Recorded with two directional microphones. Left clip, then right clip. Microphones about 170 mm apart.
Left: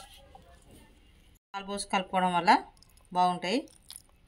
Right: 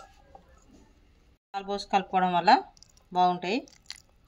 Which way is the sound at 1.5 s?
20° right (ahead or behind).